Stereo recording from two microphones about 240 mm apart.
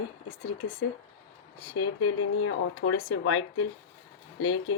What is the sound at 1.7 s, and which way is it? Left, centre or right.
Speech, left.